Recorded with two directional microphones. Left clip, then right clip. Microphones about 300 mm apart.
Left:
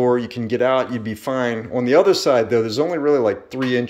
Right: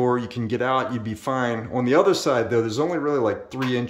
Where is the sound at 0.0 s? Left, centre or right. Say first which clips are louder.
Left 4 dB; centre.